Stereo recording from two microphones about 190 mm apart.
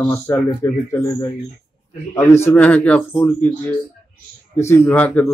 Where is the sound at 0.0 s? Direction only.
10° left (ahead or behind).